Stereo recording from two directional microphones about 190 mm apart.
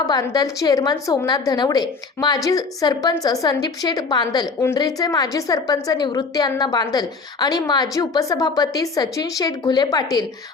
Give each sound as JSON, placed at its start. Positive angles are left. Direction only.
{"t": 0.0, "sound": "a woman's voice", "side_deg": 20}